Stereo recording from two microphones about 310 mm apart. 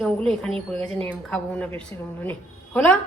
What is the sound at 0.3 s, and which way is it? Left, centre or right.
A woman's voice, centre.